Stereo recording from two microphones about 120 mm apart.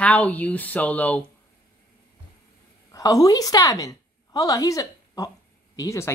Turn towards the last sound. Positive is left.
turn(degrees=25)  # may be behind; listen again after turning